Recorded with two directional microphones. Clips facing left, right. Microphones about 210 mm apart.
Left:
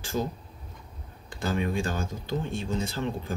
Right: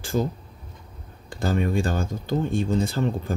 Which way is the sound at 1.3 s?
35° right (ahead or behind).